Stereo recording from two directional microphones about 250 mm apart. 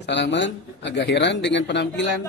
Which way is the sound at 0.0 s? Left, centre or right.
Left.